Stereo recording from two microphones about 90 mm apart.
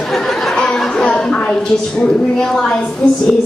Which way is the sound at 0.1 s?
5° left (ahead or behind).